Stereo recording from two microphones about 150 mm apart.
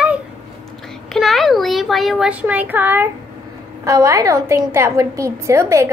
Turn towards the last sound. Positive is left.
turn(degrees=-20)  # may be behind; listen again after turning